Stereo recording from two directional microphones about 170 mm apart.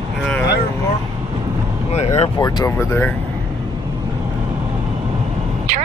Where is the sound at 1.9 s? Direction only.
40° left (ahead or behind).